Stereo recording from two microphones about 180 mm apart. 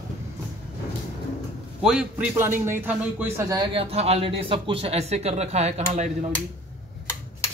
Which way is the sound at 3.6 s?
30° right (ahead or behind).